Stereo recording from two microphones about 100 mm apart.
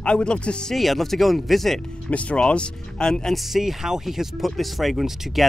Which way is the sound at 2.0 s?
10° left (ahead or behind).